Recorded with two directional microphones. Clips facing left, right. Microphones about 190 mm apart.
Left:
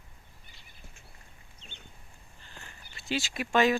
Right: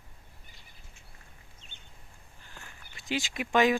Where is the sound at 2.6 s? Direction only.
15° right (ahead or behind).